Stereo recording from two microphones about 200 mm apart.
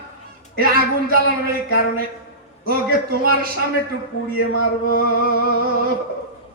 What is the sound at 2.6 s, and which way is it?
Speech, 45° right (ahead or behind).